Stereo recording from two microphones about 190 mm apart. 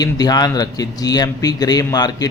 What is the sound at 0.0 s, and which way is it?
Speech, 20° left (ahead or behind).